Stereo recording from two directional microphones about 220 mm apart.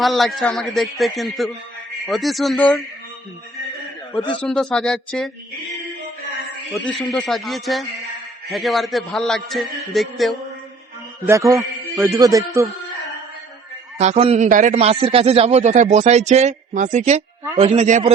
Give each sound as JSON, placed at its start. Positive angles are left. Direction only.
{"t": 0.0, "sound": "a man's voice", "side_deg": 0}
{"t": 4.4, "sound": "a man's voice", "side_deg": 5}
{"t": 6.7, "sound": "a man's voice", "side_deg": 0}
{"t": 11.3, "sound": "a man's voice", "side_deg": -15}
{"t": 14.0, "sound": "a man's voice", "side_deg": -30}